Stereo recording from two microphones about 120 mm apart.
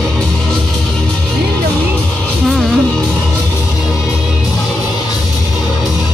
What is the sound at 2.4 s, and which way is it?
Music, centre (ahead or behind).